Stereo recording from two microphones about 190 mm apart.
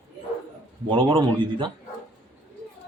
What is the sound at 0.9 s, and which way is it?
Speech, 25° right (ahead or behind).